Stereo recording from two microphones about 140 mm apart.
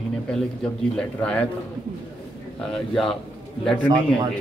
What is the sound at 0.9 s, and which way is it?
Speech, 10° left (ahead or behind).